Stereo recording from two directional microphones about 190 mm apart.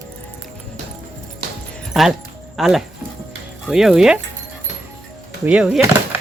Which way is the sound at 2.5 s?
Centre (ahead or behind).